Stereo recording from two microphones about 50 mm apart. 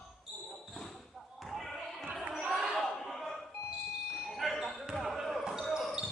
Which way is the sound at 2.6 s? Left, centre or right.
Centre.